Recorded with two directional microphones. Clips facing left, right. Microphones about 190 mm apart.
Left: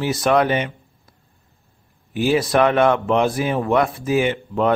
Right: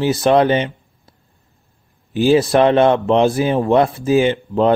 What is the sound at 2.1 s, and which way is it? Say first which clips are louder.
Speech: right 5 dB; 25° right (ahead or behind).